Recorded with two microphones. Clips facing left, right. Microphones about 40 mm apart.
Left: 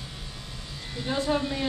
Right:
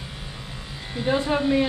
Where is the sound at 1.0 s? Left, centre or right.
Right.